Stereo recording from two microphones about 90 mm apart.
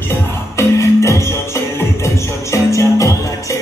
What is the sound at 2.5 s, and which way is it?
Music, 35° left (ahead or behind).